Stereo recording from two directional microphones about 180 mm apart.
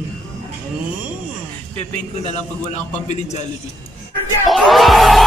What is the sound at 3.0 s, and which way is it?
Speech, 40° left (ahead or behind).